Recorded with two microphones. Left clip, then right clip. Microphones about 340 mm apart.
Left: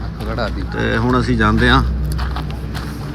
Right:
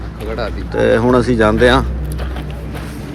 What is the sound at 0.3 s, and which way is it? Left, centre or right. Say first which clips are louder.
Speech: right 1 dB; left.